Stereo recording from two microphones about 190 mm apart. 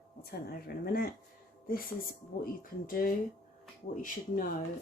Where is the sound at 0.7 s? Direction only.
50° left (ahead or behind).